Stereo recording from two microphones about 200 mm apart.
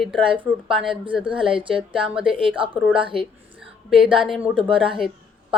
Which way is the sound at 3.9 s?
5° right (ahead or behind).